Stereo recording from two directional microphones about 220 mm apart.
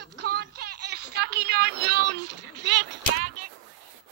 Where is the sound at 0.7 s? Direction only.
90° right.